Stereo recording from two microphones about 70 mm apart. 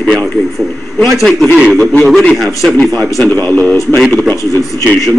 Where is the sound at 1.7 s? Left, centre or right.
Centre.